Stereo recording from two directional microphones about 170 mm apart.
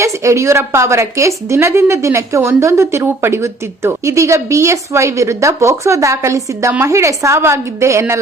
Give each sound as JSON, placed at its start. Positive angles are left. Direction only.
{"t": 0.0, "sound": "speech", "side_deg": -15}